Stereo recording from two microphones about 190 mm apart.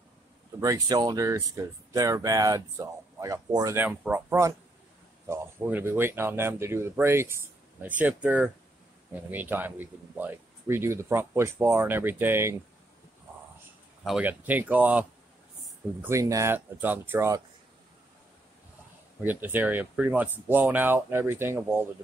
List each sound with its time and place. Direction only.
0.6 s speech: 20° right (ahead or behind)
14.0 s speech: 5° right (ahead or behind)
19.2 s speech: 10° right (ahead or behind)